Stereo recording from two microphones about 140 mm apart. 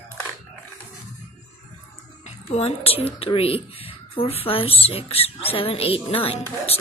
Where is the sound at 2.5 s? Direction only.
45° left (ahead or behind).